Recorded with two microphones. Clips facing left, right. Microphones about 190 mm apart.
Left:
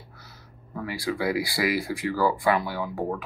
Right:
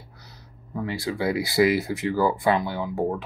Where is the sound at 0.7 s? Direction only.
25° right (ahead or behind).